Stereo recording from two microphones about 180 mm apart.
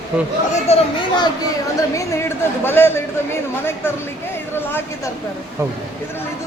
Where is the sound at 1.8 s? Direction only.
15° left (ahead or behind).